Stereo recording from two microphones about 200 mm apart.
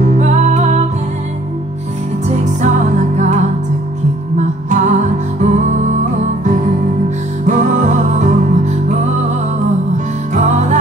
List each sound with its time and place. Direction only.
0.1 s music: 35° right (ahead or behind)
2.2 s music: 35° right (ahead or behind)
4.4 s music: 35° right (ahead or behind)
10.3 s music: 35° right (ahead or behind)